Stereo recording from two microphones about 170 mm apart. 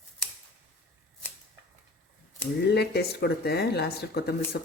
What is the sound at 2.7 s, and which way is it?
Speech, 75° left (ahead or behind).